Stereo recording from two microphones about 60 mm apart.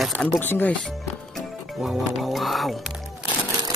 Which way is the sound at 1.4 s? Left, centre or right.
Centre.